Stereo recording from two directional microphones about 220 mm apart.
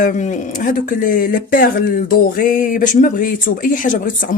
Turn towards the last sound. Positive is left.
turn(degrees=35)  # may be behind; listen again after turning